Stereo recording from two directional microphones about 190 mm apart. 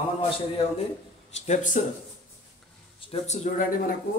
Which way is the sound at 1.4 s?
40° left (ahead or behind).